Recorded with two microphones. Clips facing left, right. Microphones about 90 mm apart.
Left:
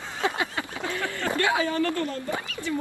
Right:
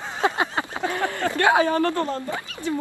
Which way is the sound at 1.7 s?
45° right (ahead or behind).